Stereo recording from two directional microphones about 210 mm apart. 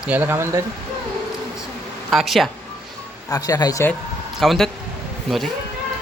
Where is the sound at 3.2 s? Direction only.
15° left (ahead or behind).